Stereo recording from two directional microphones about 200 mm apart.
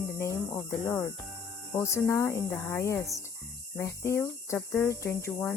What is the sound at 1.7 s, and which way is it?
Cricket, 10° left (ahead or behind).